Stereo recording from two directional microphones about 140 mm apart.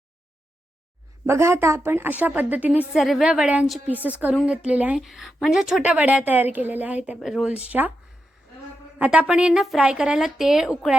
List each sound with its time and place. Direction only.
1.3 s a woman's voice: 20° right (ahead or behind)
9.0 s a woman's voice: 10° right (ahead or behind)